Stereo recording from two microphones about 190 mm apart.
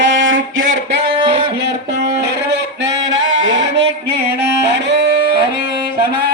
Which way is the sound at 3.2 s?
90° right.